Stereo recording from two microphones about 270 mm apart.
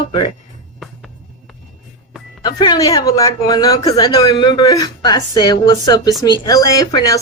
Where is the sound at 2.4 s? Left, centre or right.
Centre.